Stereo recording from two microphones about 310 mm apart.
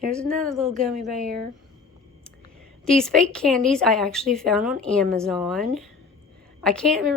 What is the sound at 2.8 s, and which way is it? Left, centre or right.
Speech, centre.